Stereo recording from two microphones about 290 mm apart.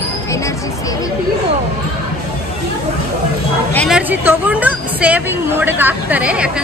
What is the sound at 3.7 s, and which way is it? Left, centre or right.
A woman's voice, centre.